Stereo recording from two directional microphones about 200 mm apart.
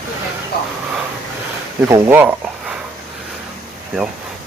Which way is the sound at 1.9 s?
10° right (ahead or behind).